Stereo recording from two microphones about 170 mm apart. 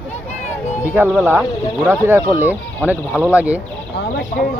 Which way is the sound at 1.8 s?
15° right (ahead or behind).